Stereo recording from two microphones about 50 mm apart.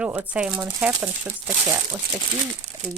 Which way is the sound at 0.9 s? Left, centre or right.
Right.